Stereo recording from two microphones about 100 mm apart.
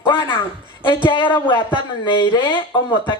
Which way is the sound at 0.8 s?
55° left (ahead or behind).